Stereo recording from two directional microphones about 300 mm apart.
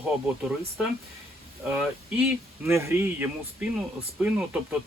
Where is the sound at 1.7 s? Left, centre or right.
Centre.